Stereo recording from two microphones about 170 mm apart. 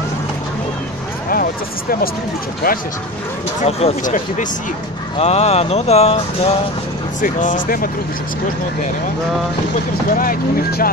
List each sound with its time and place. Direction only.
1.3 s speech: 60° left (ahead or behind)
3.6 s speech: 45° left (ahead or behind)
5.2 s speech: 40° left (ahead or behind)
7.2 s speech: 50° left (ahead or behind)
10.1 s speech: 55° left (ahead or behind)